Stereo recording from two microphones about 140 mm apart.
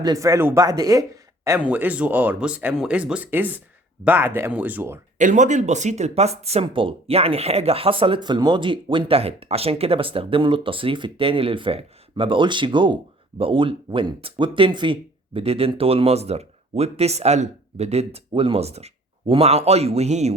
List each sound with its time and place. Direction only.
0.0 s speech: 25° right (ahead or behind)
1.6 s speech: 10° right (ahead or behind)
5.1 s speech: 60° right (ahead or behind)